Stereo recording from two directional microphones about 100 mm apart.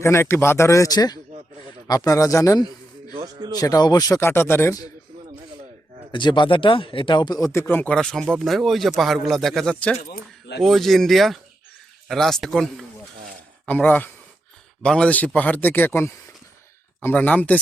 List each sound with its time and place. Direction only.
0.0 s a man's voice: 25° left (ahead or behind)
3.6 s speech: 40° left (ahead or behind)
4.2 s a man's voice: 25° left (ahead or behind)
6.1 s speech: 50° left (ahead or behind)
7.5 s a man's voice: 20° left (ahead or behind)
7.9 s a man's voice: 5° left (ahead or behind)
13.7 s a man's voice: 15° left (ahead or behind)